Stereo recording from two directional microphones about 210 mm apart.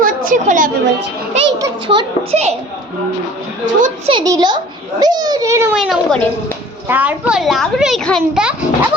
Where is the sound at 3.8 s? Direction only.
30° right (ahead or behind).